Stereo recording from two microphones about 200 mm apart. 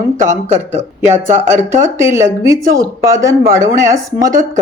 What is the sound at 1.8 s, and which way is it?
Speech, 15° right (ahead or behind).